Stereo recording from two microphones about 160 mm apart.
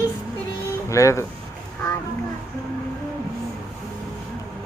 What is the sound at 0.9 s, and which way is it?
Speech, 20° left (ahead or behind).